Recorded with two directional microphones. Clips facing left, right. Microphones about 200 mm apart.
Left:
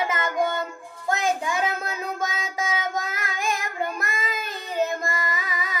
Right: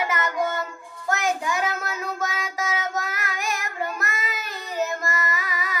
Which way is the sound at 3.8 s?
20° left (ahead or behind).